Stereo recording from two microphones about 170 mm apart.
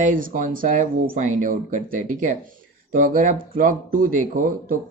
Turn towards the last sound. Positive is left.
turn(degrees=-55)  # may be behind; listen again after turning